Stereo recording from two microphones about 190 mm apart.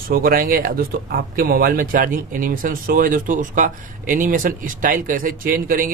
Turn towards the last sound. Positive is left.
turn(degrees=-50)  # may be behind; listen again after turning